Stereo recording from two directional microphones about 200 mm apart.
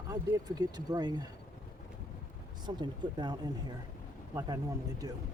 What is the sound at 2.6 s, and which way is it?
Speech, 20° right (ahead or behind).